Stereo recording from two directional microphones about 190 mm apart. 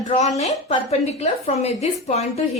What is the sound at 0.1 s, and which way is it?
A woman's voice, 35° left (ahead or behind).